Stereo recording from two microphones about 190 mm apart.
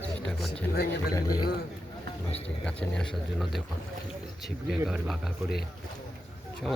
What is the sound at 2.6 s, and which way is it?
Speech, 5° left (ahead or behind).